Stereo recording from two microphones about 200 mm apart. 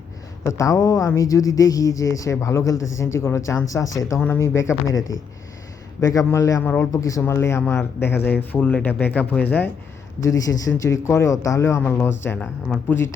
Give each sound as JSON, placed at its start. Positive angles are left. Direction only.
{"t": 0.4, "sound": "speech", "side_deg": 15}
{"t": 6.0, "sound": "speech", "side_deg": 15}